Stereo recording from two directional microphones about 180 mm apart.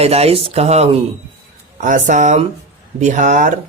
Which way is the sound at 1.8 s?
45° right (ahead or behind).